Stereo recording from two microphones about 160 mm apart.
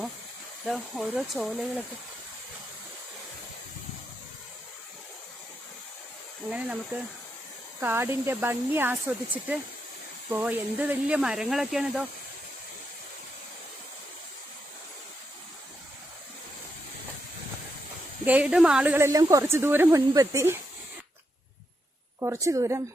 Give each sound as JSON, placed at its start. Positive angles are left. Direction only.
{"t": 0.6, "sound": "speech", "side_deg": 0}
{"t": 6.5, "sound": "speech", "side_deg": -10}
{"t": 18.3, "sound": "speech", "side_deg": -10}
{"t": 18.9, "sound": "speech", "side_deg": -20}
{"t": 22.2, "sound": "a woman's voice", "side_deg": -20}